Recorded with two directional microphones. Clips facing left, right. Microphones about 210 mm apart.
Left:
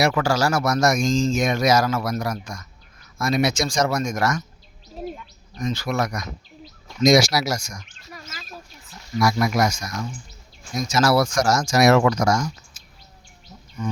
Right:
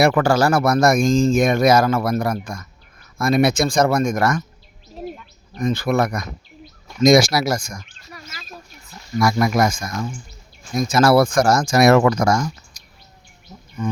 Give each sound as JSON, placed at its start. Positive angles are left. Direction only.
{"t": 0.0, "sound": "speech", "side_deg": -55}
{"t": 5.5, "sound": "speech", "side_deg": -55}
{"t": 9.1, "sound": "speech", "side_deg": -50}